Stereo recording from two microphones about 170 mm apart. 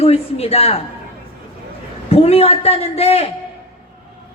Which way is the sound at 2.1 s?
35° left (ahead or behind).